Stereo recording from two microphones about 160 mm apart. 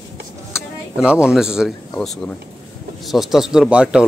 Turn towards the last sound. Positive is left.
turn(degrees=-5)  # may be behind; listen again after turning